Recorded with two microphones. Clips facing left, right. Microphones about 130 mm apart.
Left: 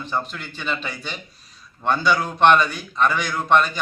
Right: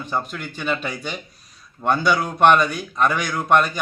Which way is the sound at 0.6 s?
50° right (ahead or behind).